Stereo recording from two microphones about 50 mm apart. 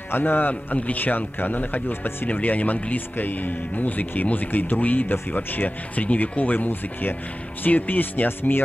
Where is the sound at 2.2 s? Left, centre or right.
Left.